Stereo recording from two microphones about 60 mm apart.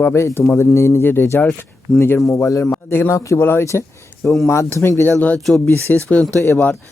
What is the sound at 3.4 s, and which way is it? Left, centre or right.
Speech, left.